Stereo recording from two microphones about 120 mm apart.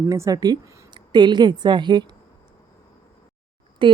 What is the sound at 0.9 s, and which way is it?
A woman's voice, 40° right (ahead or behind).